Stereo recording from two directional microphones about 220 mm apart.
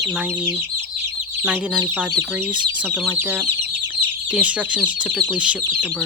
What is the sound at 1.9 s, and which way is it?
Speech, 5° right (ahead or behind).